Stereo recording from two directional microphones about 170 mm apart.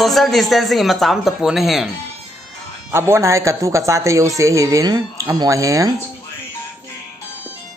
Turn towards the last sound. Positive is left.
turn(degrees=-20)  # may be behind; listen again after turning